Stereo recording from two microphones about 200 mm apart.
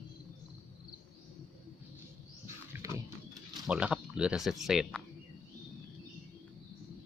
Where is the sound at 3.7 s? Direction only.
5° right (ahead or behind).